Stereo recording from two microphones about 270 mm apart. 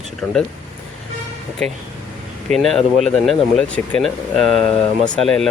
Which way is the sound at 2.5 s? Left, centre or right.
Centre.